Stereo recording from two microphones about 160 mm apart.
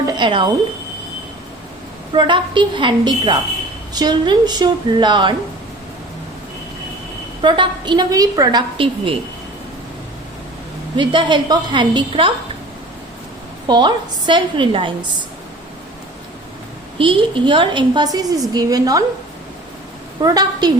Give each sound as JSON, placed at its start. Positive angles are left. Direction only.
{"t": 0.1, "sound": "speech", "side_deg": -30}
{"t": 2.1, "sound": "a woman's voice", "side_deg": -30}
{"t": 7.4, "sound": "a woman's voice", "side_deg": -30}
{"t": 10.9, "sound": "a woman's voice", "side_deg": -30}
{"t": 13.7, "sound": "a woman's voice", "side_deg": -30}
{"t": 17.0, "sound": "a woman's voice", "side_deg": -30}
{"t": 20.2, "sound": "a woman's voice", "side_deg": -25}